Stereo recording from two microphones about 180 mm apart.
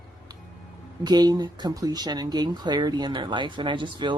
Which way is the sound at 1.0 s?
20° right (ahead or behind).